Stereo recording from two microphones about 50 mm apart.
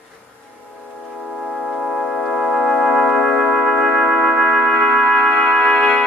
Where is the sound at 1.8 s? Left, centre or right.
Centre.